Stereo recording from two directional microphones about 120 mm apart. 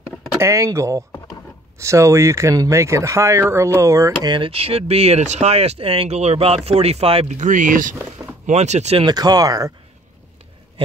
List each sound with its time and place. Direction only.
0.4 s speech: 25° right (ahead or behind)
4.3 s speech: 50° right (ahead or behind)
7.3 s speech: 90° right
8.5 s speech: 70° right (ahead or behind)
9.0 s speech: 35° right (ahead or behind)